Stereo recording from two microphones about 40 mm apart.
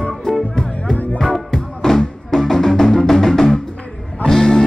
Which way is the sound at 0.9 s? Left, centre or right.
Left.